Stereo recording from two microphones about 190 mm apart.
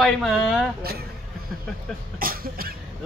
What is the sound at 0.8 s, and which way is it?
Speech, 55° right (ahead or behind).